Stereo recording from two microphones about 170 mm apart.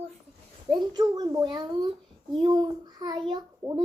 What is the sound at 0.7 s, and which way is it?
A child's voice, 25° right (ahead or behind).